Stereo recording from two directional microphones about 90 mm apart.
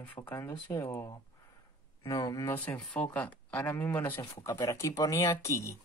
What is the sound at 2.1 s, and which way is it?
Speech, 45° left (ahead or behind).